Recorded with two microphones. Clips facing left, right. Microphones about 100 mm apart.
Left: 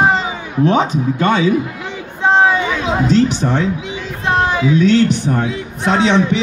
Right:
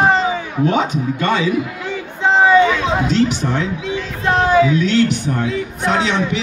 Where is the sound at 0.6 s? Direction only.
35° left (ahead or behind).